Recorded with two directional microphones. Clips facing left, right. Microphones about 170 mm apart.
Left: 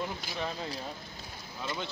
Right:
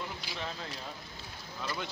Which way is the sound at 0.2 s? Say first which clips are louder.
Left 4 dB; 45° left (ahead or behind).